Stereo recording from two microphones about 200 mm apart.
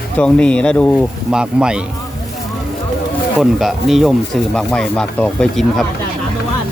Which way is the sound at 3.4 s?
Centre (ahead or behind).